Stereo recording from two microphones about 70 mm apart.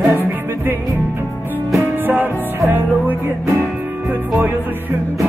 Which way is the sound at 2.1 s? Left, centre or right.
Right.